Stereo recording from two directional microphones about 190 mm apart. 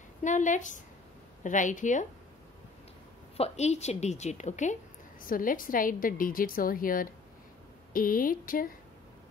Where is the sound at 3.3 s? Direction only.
35° left (ahead or behind).